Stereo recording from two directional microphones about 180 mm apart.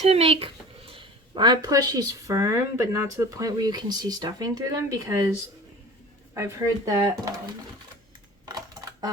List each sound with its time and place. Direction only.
0.0 s speech: 35° right (ahead or behind); by 5.3 s 15° right (ahead or behind)
6.3 s speech: 15° right (ahead or behind)
8.4 s coin: 20° right (ahead or behind)